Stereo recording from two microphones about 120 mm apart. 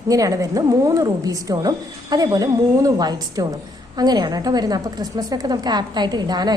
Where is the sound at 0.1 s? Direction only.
30° right (ahead or behind).